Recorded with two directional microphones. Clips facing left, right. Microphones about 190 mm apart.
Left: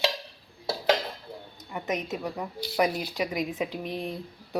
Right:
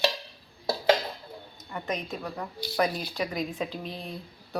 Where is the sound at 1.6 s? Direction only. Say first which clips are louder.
Left 2 dB; 15° left (ahead or behind).